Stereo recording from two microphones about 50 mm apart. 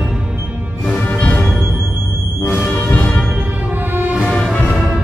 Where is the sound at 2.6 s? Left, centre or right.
Left.